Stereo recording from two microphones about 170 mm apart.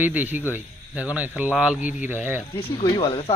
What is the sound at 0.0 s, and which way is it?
A man's voice, 10° right (ahead or behind).